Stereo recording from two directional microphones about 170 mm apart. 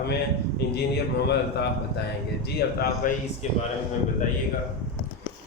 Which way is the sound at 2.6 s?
65° left (ahead or behind).